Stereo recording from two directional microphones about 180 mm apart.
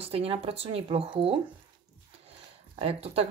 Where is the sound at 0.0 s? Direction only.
35° right (ahead or behind).